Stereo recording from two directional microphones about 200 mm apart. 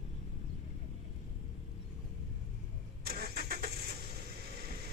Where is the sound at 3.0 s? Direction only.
50° right (ahead or behind).